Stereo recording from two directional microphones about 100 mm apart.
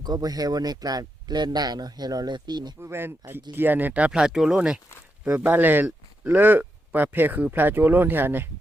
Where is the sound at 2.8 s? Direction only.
25° right (ahead or behind).